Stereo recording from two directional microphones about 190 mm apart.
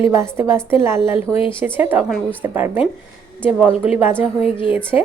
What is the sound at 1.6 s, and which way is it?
A woman's voice, 10° right (ahead or behind).